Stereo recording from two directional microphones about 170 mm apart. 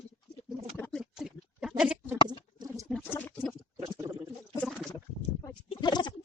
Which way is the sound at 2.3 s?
25° right (ahead or behind).